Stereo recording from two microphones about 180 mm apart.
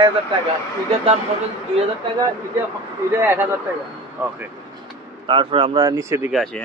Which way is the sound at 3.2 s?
10° right (ahead or behind).